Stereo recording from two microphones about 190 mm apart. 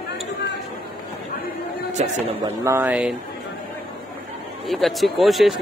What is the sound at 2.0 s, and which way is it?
Speech, 35° right (ahead or behind).